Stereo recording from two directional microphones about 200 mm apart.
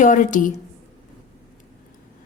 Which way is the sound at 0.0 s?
40° left (ahead or behind).